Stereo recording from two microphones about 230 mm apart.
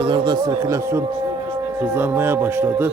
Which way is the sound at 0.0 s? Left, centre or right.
Centre.